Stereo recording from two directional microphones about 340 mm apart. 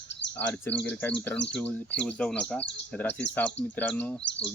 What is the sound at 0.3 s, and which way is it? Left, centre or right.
Speech, centre.